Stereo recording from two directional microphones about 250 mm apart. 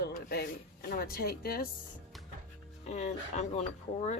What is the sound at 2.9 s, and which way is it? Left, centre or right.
Speech, left.